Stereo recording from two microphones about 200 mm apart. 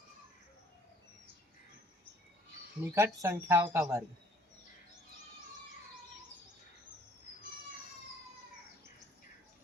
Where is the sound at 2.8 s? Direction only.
15° right (ahead or behind).